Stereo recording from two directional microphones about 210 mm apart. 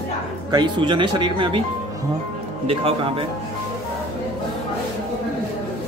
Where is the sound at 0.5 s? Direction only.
20° right (ahead or behind).